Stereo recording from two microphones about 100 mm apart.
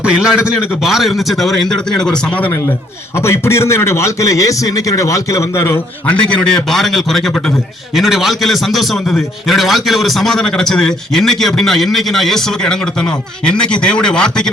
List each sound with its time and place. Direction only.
0.0 s a man's voice: 10° right (ahead or behind); by 2.6 s 15° left (ahead or behind)
3.2 s a man's voice: 25° left (ahead or behind)
6.1 s a man's voice: 10° left (ahead or behind)